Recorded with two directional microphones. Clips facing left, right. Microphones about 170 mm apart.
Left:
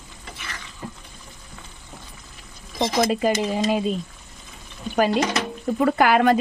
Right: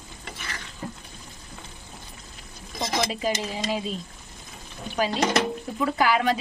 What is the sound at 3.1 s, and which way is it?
Speech, 50° left (ahead or behind).